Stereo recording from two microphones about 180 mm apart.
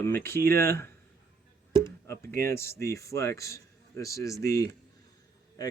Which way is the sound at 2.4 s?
15° left (ahead or behind).